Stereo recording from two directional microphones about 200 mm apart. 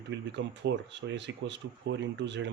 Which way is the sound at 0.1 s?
60° right (ahead or behind).